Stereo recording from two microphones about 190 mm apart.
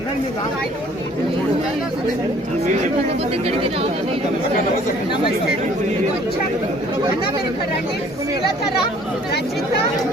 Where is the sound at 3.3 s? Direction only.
30° right (ahead or behind).